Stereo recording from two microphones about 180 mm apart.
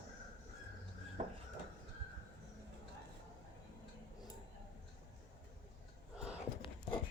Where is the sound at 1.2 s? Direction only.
35° right (ahead or behind).